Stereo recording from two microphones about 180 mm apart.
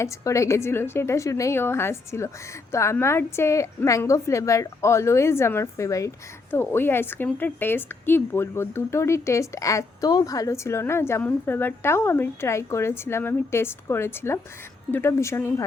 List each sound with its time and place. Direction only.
0.0 s a woman's voice: 15° left (ahead or behind)